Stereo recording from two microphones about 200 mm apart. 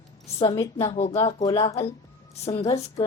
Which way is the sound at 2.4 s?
30° left (ahead or behind).